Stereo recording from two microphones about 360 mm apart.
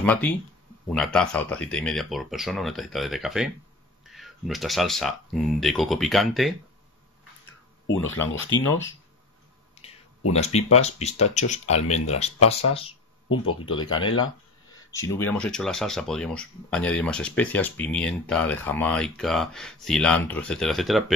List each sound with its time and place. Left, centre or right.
0.0 s speech: centre
7.8 s speech: left
9.8 s a sound: centre
10.3 s speech: centre
13.6 s speech: centre
13.9 s speech: left
14.9 s speech: centre